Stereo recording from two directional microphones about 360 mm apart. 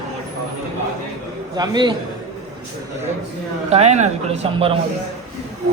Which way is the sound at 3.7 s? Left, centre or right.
Centre.